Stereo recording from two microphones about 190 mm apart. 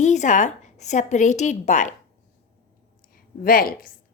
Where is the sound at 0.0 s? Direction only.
40° left (ahead or behind).